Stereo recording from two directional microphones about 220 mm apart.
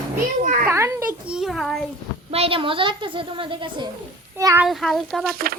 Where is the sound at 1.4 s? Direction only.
Centre (ahead or behind).